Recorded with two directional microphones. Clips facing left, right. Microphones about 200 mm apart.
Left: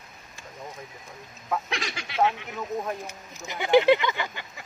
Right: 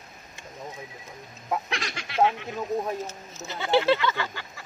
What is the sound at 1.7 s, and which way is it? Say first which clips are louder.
Speech: even; centre (ahead or behind).